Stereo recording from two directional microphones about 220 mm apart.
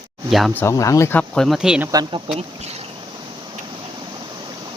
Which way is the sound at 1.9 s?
15° right (ahead or behind).